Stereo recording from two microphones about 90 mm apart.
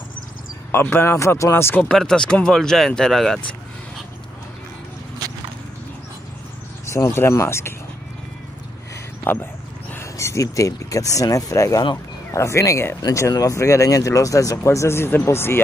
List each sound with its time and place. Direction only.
0.7 s speech: 25° left (ahead or behind)
1.8 s speech: 5° left (ahead or behind)
6.9 s speech: 30° left (ahead or behind)
9.2 s speech: 25° left (ahead or behind)